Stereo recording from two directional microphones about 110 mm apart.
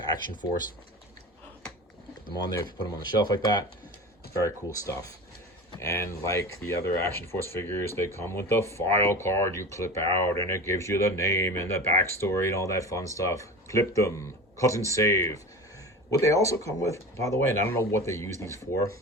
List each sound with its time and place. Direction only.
3.0 s speech: 40° left (ahead or behind)